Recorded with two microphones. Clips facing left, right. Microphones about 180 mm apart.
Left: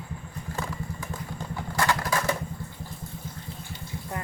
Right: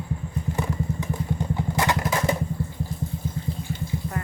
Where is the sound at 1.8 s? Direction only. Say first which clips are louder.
Right 1 dB; 20° right (ahead or behind).